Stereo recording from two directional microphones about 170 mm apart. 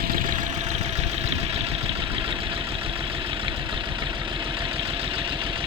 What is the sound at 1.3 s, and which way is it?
Vehicle, 35° right (ahead or behind).